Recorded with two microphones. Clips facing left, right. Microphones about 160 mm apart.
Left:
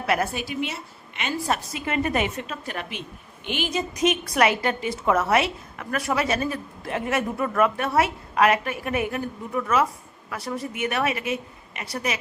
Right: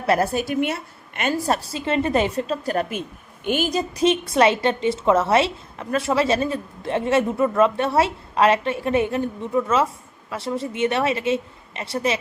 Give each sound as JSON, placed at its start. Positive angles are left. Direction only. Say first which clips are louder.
{"t": 0.0, "sound": "a woman's voice", "louder": "right 5 dB", "side_deg": -40}
{"t": 1.5, "sound": "a woman's voice", "louder": "right 4 dB", "side_deg": -35}